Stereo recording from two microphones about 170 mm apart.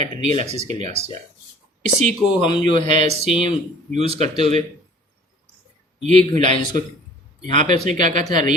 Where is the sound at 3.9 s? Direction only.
35° right (ahead or behind).